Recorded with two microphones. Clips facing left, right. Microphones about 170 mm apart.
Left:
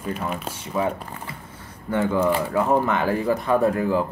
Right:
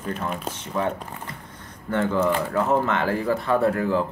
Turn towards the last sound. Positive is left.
turn(degrees=15)  # may be behind; listen again after turning